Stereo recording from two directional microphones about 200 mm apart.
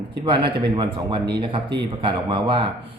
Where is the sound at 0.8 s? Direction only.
20° right (ahead or behind).